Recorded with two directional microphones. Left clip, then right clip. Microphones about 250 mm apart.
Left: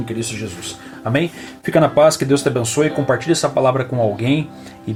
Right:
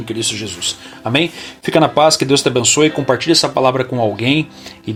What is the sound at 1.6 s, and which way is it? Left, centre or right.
Speech, centre.